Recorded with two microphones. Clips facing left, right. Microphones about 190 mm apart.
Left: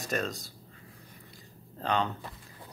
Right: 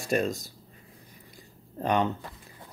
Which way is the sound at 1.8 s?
15° right (ahead or behind).